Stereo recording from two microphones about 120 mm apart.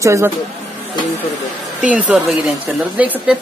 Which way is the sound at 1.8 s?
10° right (ahead or behind).